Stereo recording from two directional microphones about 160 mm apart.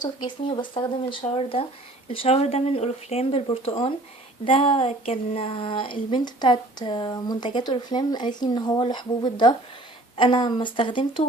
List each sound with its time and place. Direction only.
0.0 s speech: 30° left (ahead or behind)